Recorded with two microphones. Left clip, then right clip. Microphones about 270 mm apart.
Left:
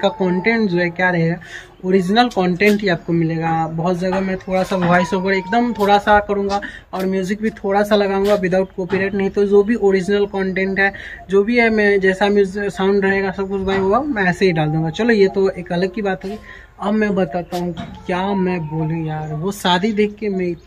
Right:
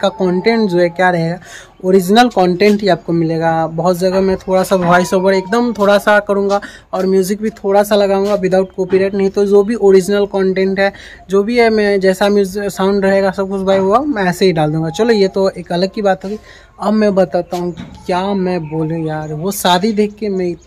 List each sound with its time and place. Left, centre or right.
0.0 s speech: centre
8.2 s speech: centre
8.5 s speech: centre